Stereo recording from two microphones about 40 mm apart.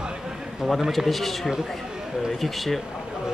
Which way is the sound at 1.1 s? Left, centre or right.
Centre.